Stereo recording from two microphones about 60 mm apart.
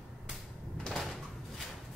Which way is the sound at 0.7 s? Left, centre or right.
Centre.